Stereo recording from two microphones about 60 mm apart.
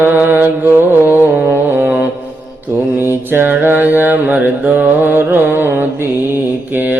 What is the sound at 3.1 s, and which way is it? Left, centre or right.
Mantra, right.